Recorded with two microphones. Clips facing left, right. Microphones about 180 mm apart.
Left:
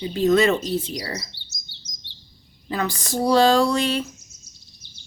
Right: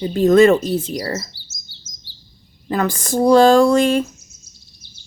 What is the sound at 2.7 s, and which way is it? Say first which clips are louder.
A woman's voice: right 6 dB; 50° right (ahead or behind).